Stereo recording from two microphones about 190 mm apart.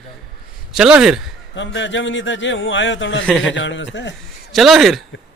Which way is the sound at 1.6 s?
75° left (ahead or behind).